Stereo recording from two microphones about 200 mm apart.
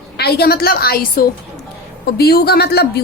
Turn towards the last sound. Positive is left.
turn(degrees=55)  # may be behind; listen again after turning